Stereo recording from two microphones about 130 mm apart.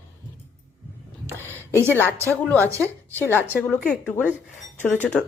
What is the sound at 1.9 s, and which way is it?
A woman's voice, 15° left (ahead or behind).